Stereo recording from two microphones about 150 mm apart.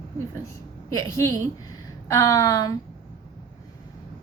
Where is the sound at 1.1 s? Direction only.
20° left (ahead or behind).